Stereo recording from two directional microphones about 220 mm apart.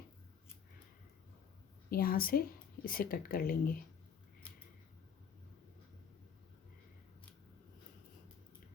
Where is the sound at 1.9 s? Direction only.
40° left (ahead or behind).